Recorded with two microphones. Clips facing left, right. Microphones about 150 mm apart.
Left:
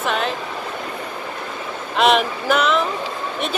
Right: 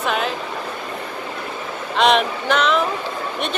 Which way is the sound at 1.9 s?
5° left (ahead or behind).